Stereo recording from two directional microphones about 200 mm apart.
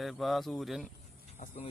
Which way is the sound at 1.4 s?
35° left (ahead or behind).